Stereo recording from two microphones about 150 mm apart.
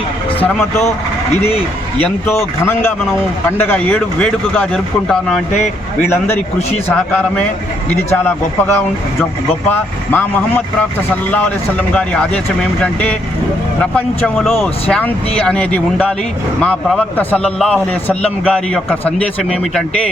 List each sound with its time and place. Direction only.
0.3 s a man's voice: 15° left (ahead or behind)
2.0 s a man's voice: 15° left (ahead or behind)
6.8 s a man's voice: 10° left (ahead or behind)
14.6 s a man's voice: 5° left (ahead or behind)